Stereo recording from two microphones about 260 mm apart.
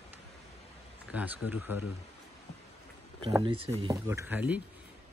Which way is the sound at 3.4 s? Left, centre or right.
Centre.